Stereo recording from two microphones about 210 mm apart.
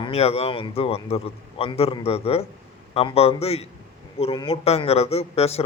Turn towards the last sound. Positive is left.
turn(degrees=30)  # may be behind; listen again after turning